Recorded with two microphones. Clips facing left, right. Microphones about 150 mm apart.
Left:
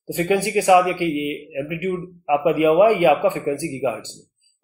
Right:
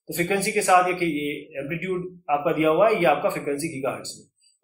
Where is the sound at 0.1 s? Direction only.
15° left (ahead or behind).